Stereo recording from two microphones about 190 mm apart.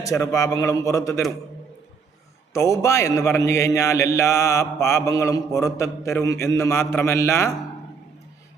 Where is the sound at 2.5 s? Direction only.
15° left (ahead or behind).